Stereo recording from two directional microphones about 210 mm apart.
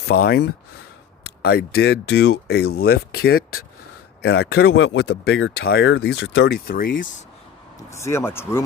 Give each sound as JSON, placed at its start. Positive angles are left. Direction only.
{"t": 0.0, "sound": "speech", "side_deg": 50}
{"t": 7.9, "sound": "speech", "side_deg": 15}